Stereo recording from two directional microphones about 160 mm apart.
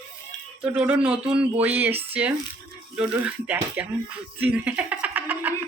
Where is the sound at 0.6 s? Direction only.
10° right (ahead or behind).